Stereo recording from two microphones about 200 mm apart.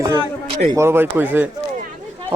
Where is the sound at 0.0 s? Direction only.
15° right (ahead or behind).